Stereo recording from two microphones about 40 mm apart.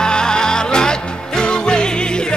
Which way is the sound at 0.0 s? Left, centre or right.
Centre.